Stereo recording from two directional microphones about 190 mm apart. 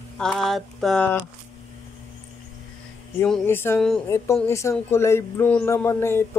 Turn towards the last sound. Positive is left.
turn(degrees=15)  # may be behind; listen again after turning